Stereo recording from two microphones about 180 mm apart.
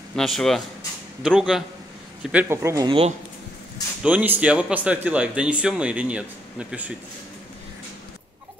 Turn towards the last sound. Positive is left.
turn(degrees=-5)  # may be behind; listen again after turning